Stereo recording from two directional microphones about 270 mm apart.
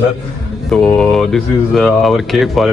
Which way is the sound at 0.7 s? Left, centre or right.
Centre.